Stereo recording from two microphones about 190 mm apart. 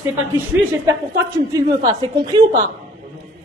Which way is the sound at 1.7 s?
20° right (ahead or behind).